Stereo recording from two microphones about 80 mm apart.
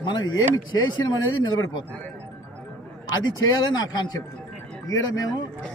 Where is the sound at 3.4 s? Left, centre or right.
Left.